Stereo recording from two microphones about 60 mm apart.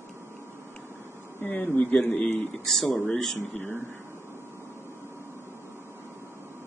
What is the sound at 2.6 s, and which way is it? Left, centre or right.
Speech, centre.